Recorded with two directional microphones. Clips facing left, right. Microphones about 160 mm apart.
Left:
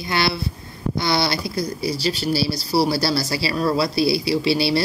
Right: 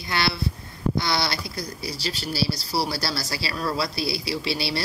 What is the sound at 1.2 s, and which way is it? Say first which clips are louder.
Speech: left 6 dB; 30° left (ahead or behind).